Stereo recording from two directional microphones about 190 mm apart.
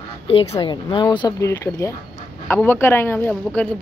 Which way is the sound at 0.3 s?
30° left (ahead or behind).